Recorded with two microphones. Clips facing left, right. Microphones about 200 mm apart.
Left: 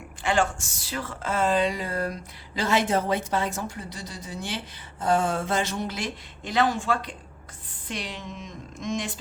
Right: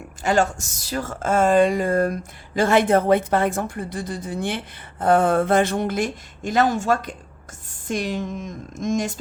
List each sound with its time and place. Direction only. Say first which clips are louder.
0.2 s a woman's voice: right 4 dB; 40° right (ahead or behind)